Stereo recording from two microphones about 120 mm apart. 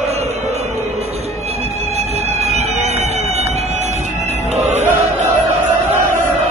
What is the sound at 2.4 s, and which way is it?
Music, 65° right (ahead or behind).